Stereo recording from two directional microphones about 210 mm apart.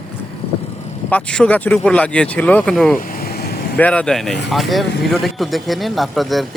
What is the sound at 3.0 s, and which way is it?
Vehicle, 45° left (ahead or behind).